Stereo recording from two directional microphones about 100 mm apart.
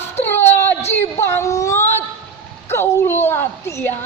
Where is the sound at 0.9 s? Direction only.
25° left (ahead or behind).